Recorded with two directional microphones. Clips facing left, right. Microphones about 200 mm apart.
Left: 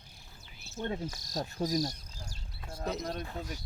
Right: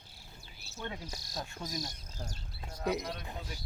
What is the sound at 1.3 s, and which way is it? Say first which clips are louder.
Insect: left 9 dB; 40° left (ahead or behind).